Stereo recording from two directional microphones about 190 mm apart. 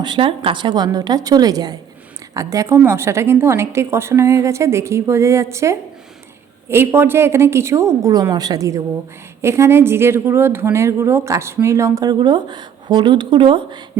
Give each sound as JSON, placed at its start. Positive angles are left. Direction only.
{"t": 0.0, "sound": "a woman's voice", "side_deg": -25}